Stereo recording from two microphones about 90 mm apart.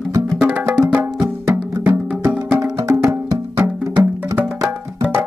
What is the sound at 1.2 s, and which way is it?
Music, 25° right (ahead or behind).